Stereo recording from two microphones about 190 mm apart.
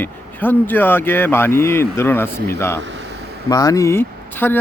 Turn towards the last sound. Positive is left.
turn(degrees=10)  # may be behind; listen again after turning